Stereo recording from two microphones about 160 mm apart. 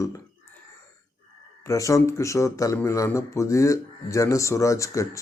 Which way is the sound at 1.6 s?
20° left (ahead or behind).